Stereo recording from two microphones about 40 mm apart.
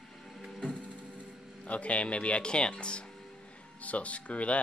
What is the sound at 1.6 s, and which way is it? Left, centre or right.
Speech, left.